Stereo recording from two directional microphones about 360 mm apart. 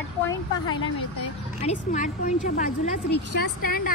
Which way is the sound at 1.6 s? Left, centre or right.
Centre.